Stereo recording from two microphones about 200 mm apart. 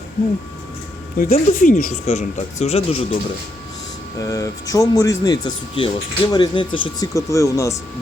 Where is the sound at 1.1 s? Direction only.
45° left (ahead or behind).